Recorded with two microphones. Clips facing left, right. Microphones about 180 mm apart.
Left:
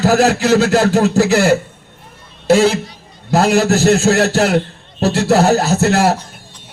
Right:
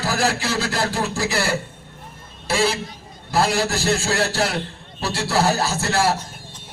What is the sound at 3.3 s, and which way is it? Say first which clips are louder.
A man's voice: left 8 dB; 70° left (ahead or behind).